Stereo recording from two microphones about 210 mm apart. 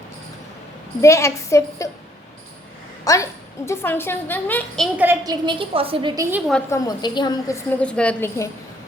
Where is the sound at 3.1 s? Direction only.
15° left (ahead or behind).